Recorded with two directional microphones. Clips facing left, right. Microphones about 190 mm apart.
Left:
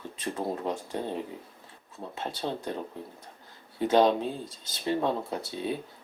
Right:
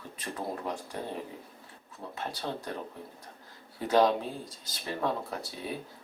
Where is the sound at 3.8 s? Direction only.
25° left (ahead or behind).